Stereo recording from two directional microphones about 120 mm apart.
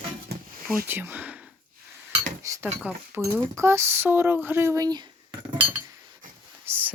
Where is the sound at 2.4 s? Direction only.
25° right (ahead or behind).